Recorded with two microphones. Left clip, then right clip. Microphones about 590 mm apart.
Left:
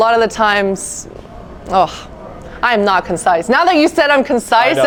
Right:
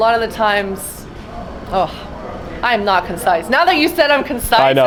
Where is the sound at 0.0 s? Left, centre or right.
Left.